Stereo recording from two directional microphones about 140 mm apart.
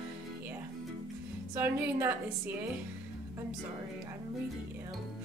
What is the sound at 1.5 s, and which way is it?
Speech, 15° right (ahead or behind).